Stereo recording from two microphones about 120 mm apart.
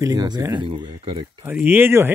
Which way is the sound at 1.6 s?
15° right (ahead or behind).